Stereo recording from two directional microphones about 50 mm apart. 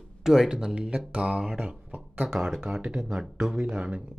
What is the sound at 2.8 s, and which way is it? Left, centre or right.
Speech, centre.